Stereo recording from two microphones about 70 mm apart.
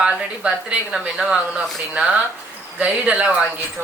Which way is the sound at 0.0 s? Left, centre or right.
Centre.